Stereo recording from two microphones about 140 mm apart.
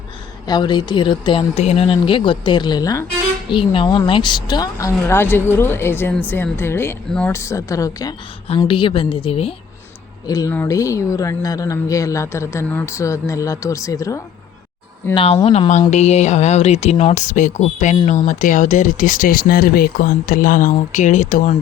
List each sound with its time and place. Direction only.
0.4 s speech: 30° left (ahead or behind)
1.5 s speech: 50° left (ahead or behind); by 3.1 s 25° left (ahead or behind)
3.5 s a woman's voice: 40° left (ahead or behind); by 7.3 s 5° left (ahead or behind)
7.3 s a woman's voice: 20° left (ahead or behind)
8.5 s speech: 35° left (ahead or behind)
10.2 s a woman's voice: 25° left (ahead or behind)
15.1 s speech: 40° left (ahead or behind); by 21.5 s 65° left (ahead or behind)